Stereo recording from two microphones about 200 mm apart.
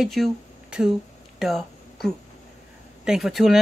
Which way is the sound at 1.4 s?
Centre (ahead or behind).